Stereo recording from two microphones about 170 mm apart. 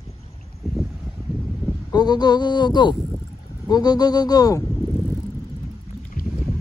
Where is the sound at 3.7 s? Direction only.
25° left (ahead or behind).